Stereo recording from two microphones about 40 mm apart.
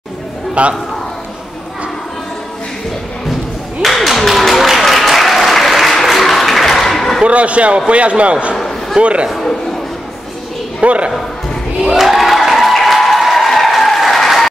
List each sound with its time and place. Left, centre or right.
0.6 s a man's voice: right
3.8 s applause: centre
7.2 s a man's voice: right
8.5 s a sound: centre
9.0 s a man's voice: right
10.8 s speech: right
11.8 s applause: centre